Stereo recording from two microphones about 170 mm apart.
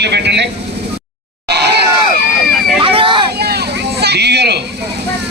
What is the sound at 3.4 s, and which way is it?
Vehicle, 70° right (ahead or behind).